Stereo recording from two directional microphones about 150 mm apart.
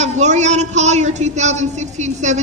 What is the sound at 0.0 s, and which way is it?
Speech, 50° right (ahead or behind).